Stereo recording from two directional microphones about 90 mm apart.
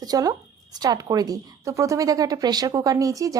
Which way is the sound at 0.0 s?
45° right (ahead or behind).